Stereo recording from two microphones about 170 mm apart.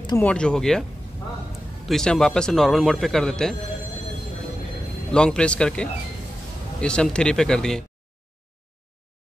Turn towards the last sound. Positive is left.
turn(degrees=5)  # may be behind; listen again after turning